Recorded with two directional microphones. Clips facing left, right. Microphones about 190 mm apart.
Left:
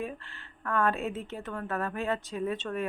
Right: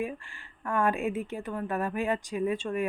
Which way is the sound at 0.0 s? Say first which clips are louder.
Right 3 dB; 10° right (ahead or behind).